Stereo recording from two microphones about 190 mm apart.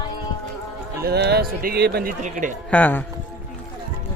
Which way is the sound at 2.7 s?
10° left (ahead or behind).